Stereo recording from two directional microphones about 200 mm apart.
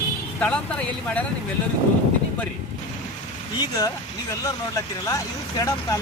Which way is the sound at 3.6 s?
20° left (ahead or behind).